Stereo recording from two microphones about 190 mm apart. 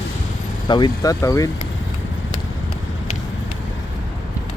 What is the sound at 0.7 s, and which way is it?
Speech, 25° left (ahead or behind).